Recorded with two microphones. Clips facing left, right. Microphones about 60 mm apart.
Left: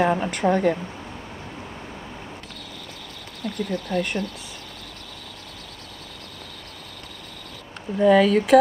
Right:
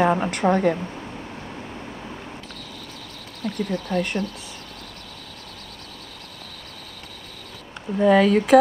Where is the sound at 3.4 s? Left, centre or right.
Right.